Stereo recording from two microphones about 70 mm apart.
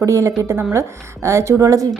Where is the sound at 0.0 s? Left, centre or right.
Right.